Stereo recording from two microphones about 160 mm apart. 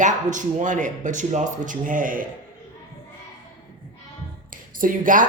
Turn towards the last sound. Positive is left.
turn(degrees=-55)  # may be behind; listen again after turning